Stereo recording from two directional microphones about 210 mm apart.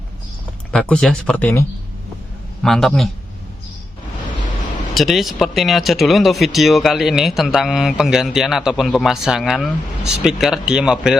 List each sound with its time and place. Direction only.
0.7 s speech: 5° left (ahead or behind)
2.6 s speech: centre (ahead or behind)
4.9 s speech: centre (ahead or behind)